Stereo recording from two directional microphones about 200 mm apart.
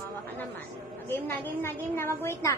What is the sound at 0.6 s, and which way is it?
A woman's voice, 10° left (ahead or behind).